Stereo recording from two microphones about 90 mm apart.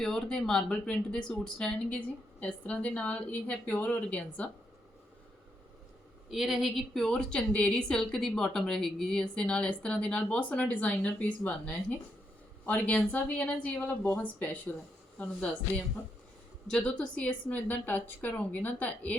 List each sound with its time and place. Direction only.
0.0 s a woman's voice: 5° left (ahead or behind)
6.3 s a woman's voice: 5° right (ahead or behind); by 14.6 s 20° left (ahead or behind)
16.6 s a woman's voice: 5° left (ahead or behind)